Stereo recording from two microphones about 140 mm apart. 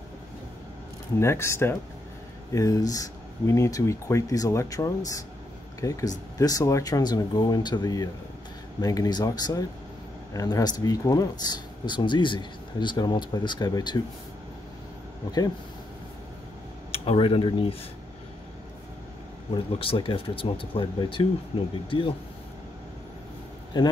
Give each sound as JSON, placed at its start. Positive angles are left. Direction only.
{"t": 1.2, "sound": "speech", "side_deg": 20}
{"t": 16.9, "sound": "speech", "side_deg": 45}
{"t": 19.5, "sound": "speech", "side_deg": 40}
{"t": 23.7, "sound": "speech", "side_deg": 30}